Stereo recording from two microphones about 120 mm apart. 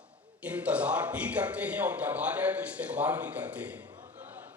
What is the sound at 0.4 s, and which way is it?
A man's voice, 10° right (ahead or behind).